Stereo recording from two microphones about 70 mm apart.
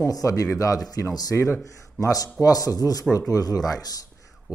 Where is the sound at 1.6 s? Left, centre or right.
Left.